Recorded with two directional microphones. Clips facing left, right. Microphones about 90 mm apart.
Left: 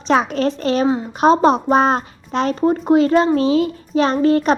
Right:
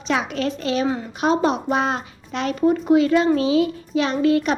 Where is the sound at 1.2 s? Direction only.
35° left (ahead or behind).